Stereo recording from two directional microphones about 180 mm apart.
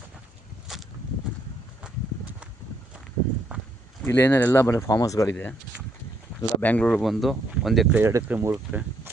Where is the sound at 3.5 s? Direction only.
5° right (ahead or behind).